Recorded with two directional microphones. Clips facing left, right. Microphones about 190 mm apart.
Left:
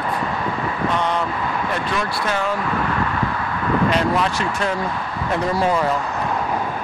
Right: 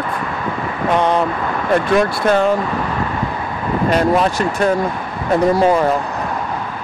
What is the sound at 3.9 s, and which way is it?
Speech, 45° right (ahead or behind).